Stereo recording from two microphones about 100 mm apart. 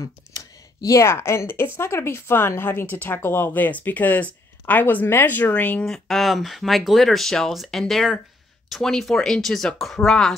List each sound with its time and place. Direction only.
0.0 s speech: 35° left (ahead or behind); by 5.9 s 15° left (ahead or behind)
5.9 s speech: centre (ahead or behind)